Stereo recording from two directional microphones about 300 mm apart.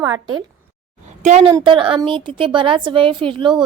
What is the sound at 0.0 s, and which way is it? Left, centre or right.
A woman's voice, centre.